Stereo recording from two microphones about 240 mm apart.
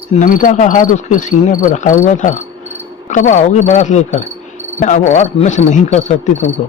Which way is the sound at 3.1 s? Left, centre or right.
Left.